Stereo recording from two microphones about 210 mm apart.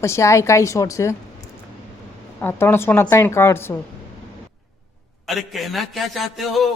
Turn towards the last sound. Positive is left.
turn(degrees=0)  # may be behind; listen again after turning